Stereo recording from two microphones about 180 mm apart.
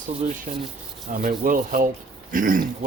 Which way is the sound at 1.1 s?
50° right (ahead or behind).